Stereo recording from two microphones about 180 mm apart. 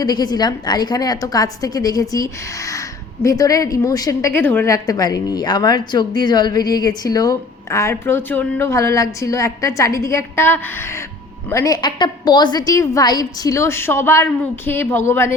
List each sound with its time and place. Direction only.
0.0 s a woman's voice: 20° left (ahead or behind)